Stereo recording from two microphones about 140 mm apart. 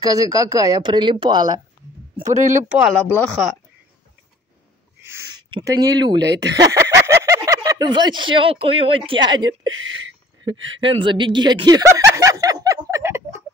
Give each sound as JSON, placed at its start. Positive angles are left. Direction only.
{"t": 0.0, "sound": "a woman's voice", "side_deg": -25}
{"t": 2.2, "sound": "speech", "side_deg": -60}
{"t": 2.9, "sound": "speech", "side_deg": 10}
{"t": 5.0, "sound": "a sound", "side_deg": -20}
{"t": 5.6, "sound": "speech", "side_deg": -25}